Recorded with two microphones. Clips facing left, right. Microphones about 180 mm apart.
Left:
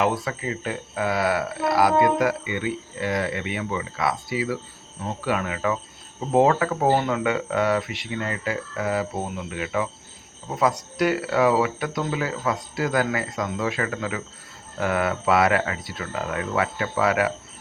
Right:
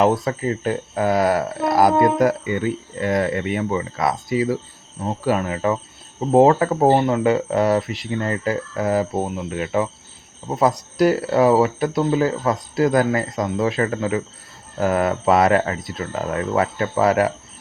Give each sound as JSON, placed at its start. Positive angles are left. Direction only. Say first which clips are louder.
{"t": 0.0, "sound": "speech", "louder": "right 6 dB", "side_deg": -40}